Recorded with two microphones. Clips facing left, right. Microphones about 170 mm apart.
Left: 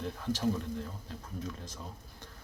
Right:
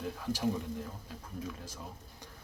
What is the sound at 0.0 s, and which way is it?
Speech, 5° right (ahead or behind).